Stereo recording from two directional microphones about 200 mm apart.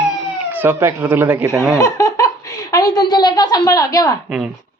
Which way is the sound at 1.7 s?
15° left (ahead or behind).